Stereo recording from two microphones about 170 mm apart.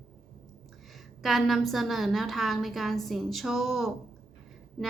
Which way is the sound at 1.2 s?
Centre (ahead or behind).